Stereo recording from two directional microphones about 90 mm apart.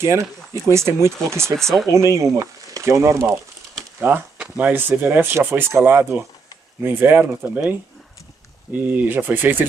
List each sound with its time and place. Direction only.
0.7 s speech: 30° right (ahead or behind)
1.6 s speech: 5° left (ahead or behind)
1.9 s speech: 35° right (ahead or behind)
8.8 s speech: 20° right (ahead or behind)